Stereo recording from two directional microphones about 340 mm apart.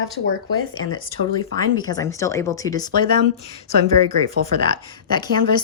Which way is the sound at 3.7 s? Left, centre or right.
Right.